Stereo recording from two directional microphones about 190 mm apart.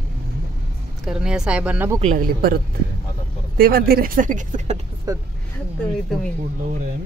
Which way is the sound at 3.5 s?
50° right (ahead or behind).